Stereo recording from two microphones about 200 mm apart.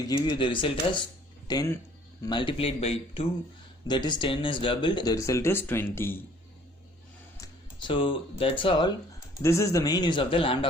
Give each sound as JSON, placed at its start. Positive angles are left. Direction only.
{"t": 0.0, "sound": "speech", "side_deg": 20}
{"t": 7.3, "sound": "speech", "side_deg": 20}